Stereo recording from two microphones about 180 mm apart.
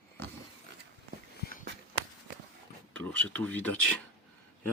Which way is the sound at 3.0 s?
10° left (ahead or behind).